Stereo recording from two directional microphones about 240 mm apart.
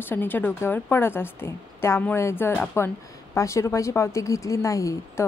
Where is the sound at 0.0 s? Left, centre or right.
Centre.